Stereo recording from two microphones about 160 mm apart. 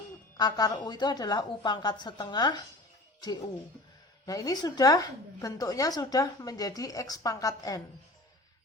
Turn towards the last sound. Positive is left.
turn(degrees=20)  # may be behind; listen again after turning